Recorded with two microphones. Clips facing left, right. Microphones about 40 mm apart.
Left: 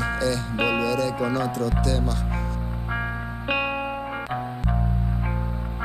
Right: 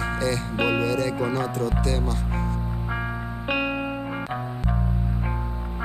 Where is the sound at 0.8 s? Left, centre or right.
Right.